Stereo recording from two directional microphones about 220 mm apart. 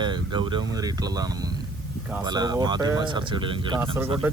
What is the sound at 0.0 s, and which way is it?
Speech, 20° right (ahead or behind).